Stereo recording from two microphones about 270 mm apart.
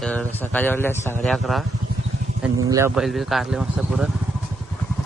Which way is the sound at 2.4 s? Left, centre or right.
Centre.